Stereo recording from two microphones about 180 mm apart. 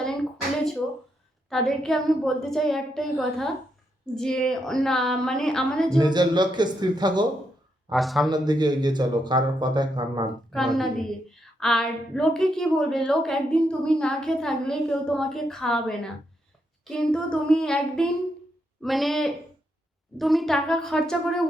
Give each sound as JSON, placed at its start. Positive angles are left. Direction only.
{"t": 1.5, "sound": "a woman's voice", "side_deg": 0}
{"t": 6.0, "sound": "speech", "side_deg": -25}
{"t": 7.9, "sound": "a woman's voice", "side_deg": 0}
{"t": 8.3, "sound": "speech", "side_deg": -25}
{"t": 10.8, "sound": "a woman's voice", "side_deg": 0}